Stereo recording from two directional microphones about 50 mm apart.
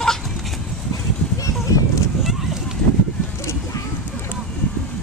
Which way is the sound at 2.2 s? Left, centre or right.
Centre.